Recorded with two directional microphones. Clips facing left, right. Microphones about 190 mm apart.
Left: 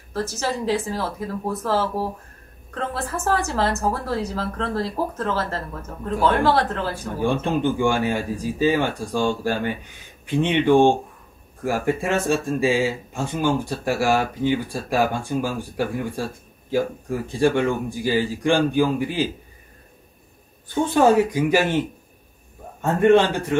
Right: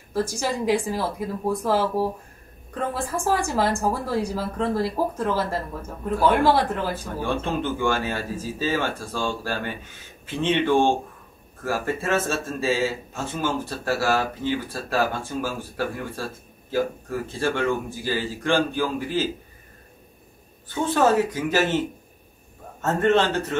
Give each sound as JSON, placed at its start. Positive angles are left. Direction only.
{"t": 0.1, "sound": "a woman's voice", "side_deg": -10}
{"t": 7.2, "sound": "speech", "side_deg": 15}
{"t": 20.6, "sound": "speech", "side_deg": 15}